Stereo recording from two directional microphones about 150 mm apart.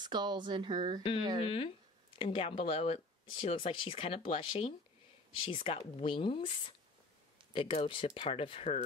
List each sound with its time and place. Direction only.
0.0 s a woman's voice: 30° right (ahead or behind)
1.4 s speech: 40° left (ahead or behind)